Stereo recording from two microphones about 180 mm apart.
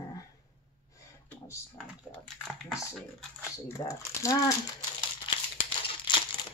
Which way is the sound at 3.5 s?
15° left (ahead or behind).